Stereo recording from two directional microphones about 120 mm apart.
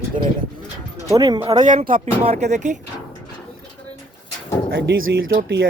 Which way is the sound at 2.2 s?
70° right (ahead or behind).